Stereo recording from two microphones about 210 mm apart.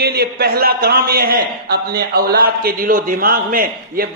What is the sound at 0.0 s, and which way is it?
A man's voice, 50° right (ahead or behind).